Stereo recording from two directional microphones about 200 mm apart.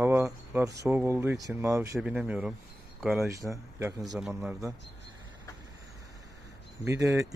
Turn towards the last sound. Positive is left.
turn(degrees=-15)  # may be behind; listen again after turning